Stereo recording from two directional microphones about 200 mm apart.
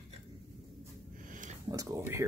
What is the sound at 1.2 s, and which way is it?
Sniff, 40° right (ahead or behind).